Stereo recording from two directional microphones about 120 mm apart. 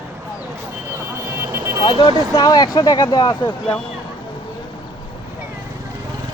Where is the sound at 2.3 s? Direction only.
30° left (ahead or behind).